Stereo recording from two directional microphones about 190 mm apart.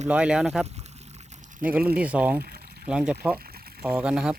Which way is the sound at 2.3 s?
55° right (ahead or behind).